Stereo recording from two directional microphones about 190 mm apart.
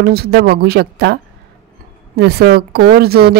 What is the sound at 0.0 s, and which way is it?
A woman's voice, 55° right (ahead or behind).